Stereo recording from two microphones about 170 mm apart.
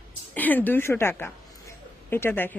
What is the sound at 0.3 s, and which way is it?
A woman's voice, 10° left (ahead or behind).